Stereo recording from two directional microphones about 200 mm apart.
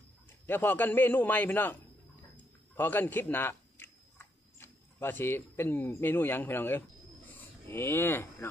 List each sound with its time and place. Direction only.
0.5 s a man's voice: 10° left (ahead or behind)